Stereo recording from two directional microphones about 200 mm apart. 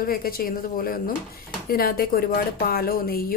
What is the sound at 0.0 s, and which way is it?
A woman's voice, 45° left (ahead or behind).